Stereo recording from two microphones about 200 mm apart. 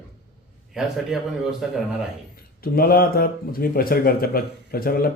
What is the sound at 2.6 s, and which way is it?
Speech, 50° left (ahead or behind).